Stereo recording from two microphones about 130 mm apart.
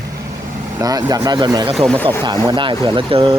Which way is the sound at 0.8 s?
30° right (ahead or behind).